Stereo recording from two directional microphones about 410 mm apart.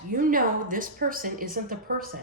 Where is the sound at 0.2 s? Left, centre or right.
Centre.